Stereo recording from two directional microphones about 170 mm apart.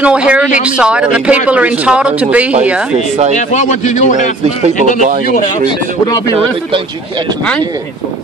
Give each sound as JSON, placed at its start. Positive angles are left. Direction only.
{"t": 0.0, "sound": "speech", "side_deg": -5}
{"t": 3.3, "sound": "a man's voice", "side_deg": 45}
{"t": 6.0, "sound": "speech", "side_deg": 20}